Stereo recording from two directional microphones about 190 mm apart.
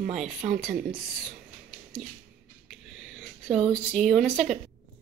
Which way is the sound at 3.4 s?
Centre (ahead or behind).